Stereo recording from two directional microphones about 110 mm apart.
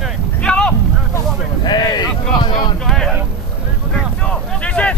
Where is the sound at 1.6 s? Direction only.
40° left (ahead or behind).